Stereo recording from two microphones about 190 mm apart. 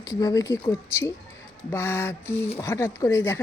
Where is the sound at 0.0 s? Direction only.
20° left (ahead or behind).